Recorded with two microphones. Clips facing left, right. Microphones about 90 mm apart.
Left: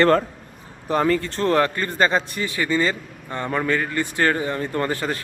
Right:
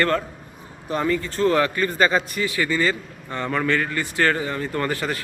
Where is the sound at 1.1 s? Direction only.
60° left (ahead or behind); by 5.1 s 25° left (ahead or behind).